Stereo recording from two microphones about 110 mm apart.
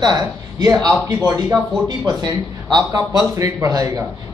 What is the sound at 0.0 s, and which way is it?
A man's voice, 35° right (ahead or behind).